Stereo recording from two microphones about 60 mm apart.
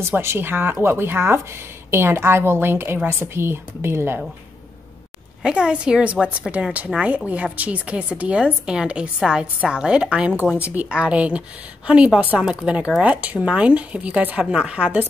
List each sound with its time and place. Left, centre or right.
0.2 s a woman's voice: right
5.4 s a woman's voice: centre